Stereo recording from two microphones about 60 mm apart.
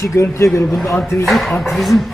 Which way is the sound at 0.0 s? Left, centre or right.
Left.